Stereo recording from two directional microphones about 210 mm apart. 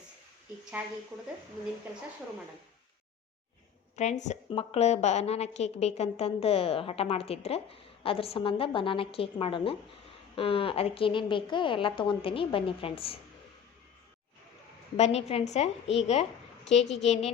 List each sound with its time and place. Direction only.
3.9 s a woman's voice: 35° left (ahead or behind)
14.9 s a woman's voice: 30° left (ahead or behind)